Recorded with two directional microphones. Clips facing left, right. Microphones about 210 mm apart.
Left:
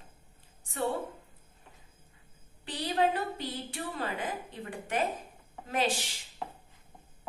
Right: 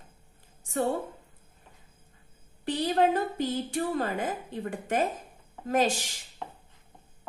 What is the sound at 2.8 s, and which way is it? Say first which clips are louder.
A woman's voice: right 3 dB; 45° right (ahead or behind).